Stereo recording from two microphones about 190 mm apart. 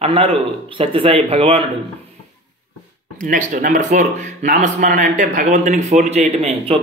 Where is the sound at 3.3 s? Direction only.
40° right (ahead or behind).